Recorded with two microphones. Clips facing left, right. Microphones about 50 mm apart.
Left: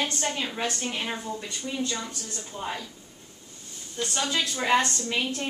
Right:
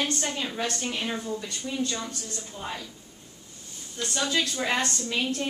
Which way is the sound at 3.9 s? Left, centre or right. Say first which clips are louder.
Right 1 dB; centre.